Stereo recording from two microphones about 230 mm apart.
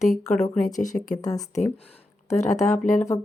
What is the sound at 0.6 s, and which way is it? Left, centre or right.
Speech, left.